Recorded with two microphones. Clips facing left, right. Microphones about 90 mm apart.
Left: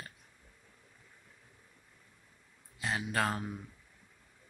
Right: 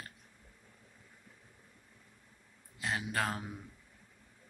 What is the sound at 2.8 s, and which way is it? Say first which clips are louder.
Speech: left 2 dB; centre (ahead or behind).